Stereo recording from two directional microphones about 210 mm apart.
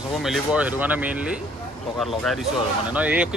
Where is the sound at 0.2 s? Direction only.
5° right (ahead or behind).